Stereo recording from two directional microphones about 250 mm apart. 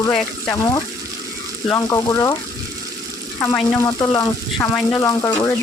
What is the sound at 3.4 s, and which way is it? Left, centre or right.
Speech, centre.